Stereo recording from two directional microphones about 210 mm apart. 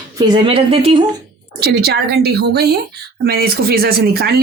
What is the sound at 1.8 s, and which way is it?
Speech, 50° right (ahead or behind).